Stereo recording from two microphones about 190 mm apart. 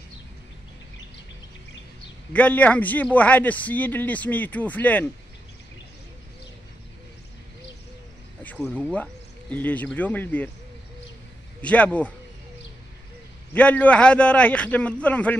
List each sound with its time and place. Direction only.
2.3 s speech: 10° left (ahead or behind)
8.7 s speech: 5° left (ahead or behind)
11.6 s speech: 5° left (ahead or behind)
13.5 s speech: 5° left (ahead or behind)